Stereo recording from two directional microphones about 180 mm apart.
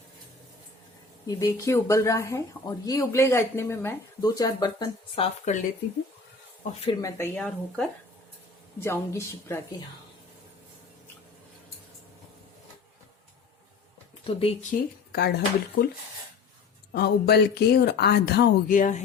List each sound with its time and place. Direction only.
1.3 s speech: 20° left (ahead or behind)
7.0 s speech: 10° left (ahead or behind)
14.3 s speech: 30° left (ahead or behind)
14.7 s speech: 60° left (ahead or behind)
16.9 s speech: 65° left (ahead or behind)
18.8 s speech: 45° left (ahead or behind)